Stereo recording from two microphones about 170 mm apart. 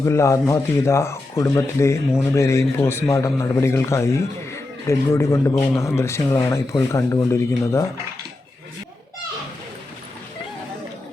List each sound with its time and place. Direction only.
0.0 s speech: 15° left (ahead or behind)